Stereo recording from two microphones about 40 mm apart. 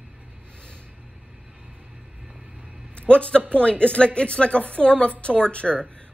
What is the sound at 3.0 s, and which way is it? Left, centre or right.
Speech, left.